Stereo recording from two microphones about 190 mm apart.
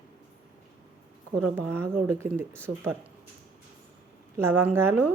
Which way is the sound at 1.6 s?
15° right (ahead or behind).